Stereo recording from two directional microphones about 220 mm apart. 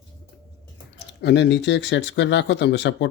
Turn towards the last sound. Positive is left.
turn(degrees=50)  # may be behind; listen again after turning